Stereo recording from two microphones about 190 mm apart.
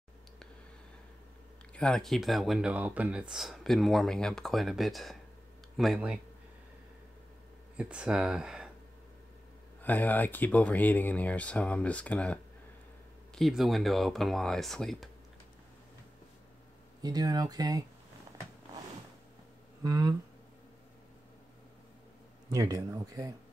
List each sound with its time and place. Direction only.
1.7 s speech: 5° left (ahead or behind)
7.7 s speech: 5° right (ahead or behind)
9.8 s speech: 10° left (ahead or behind)
17.0 s speech: 20° right (ahead or behind)
19.8 s speech: 15° right (ahead or behind)
22.5 s speech: 20° right (ahead or behind)